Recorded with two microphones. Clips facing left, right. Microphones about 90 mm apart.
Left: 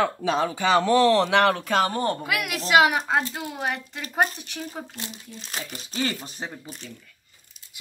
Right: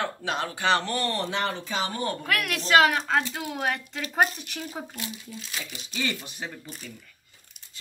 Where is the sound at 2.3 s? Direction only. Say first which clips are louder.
Even; 5° left (ahead or behind).